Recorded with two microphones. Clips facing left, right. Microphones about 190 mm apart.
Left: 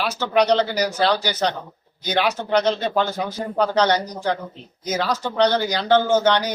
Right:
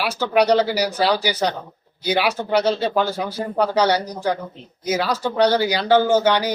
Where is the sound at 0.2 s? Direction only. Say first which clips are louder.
Right 2 dB; 10° right (ahead or behind).